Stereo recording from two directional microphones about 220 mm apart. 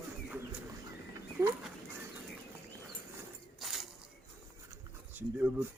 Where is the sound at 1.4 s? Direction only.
10° right (ahead or behind).